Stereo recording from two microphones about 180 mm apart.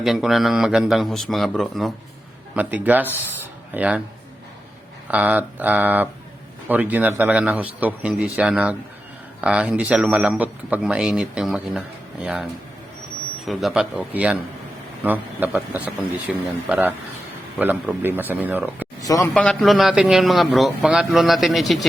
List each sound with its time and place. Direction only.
0.0 s a man's voice: centre (ahead or behind)
5.1 s a man's voice: 10° right (ahead or behind)
19.0 s speech: 20° left (ahead or behind)
19.3 s a man's voice: 5° left (ahead or behind)